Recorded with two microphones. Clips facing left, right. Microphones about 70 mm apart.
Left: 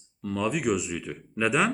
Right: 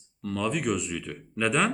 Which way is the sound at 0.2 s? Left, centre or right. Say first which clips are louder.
Left 1 dB; centre.